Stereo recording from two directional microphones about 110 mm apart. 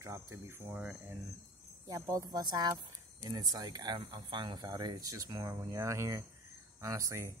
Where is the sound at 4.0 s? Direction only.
50° right (ahead or behind).